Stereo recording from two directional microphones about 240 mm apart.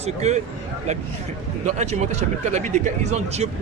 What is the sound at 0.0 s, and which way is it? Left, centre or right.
Speech, right.